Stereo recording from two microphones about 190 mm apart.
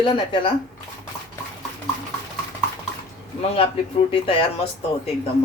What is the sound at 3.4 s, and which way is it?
A woman's voice, 30° left (ahead or behind).